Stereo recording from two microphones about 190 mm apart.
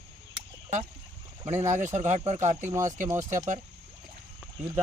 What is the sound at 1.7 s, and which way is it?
Speech, 40° right (ahead or behind).